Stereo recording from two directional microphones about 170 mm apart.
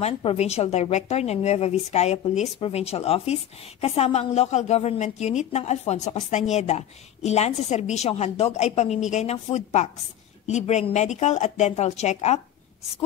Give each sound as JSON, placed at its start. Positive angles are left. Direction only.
{"t": 0.0, "sound": "a woman's voice", "side_deg": 35}